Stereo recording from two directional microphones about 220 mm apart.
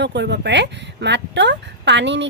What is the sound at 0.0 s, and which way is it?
Speech, 50° right (ahead or behind).